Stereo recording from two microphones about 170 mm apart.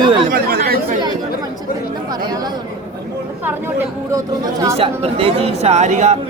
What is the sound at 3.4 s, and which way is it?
Speech, 10° right (ahead or behind).